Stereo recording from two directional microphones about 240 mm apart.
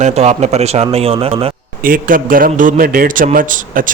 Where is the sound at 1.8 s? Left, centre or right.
Right.